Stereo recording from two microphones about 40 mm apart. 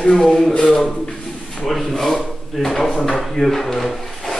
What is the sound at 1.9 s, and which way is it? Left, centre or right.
Speech, centre.